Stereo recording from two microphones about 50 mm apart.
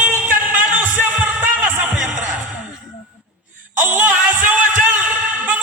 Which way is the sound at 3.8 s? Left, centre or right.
Right.